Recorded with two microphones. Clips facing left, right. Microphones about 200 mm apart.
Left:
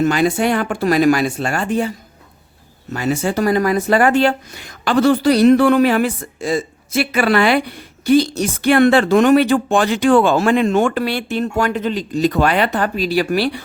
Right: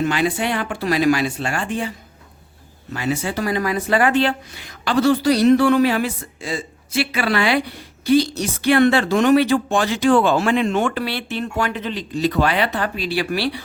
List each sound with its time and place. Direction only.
0.0 s speech: 45° left (ahead or behind)
2.9 s speech: 45° left (ahead or behind)